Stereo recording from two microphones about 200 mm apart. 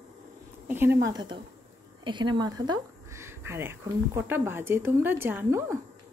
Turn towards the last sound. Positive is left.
turn(degrees=-10)  # may be behind; listen again after turning